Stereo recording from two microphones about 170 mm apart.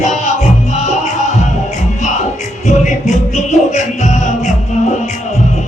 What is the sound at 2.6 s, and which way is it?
Music, 45° left (ahead or behind).